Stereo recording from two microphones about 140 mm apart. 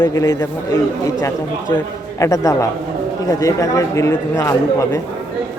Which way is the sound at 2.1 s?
20° left (ahead or behind).